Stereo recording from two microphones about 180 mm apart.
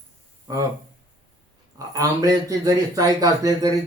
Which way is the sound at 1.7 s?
20° right (ahead or behind).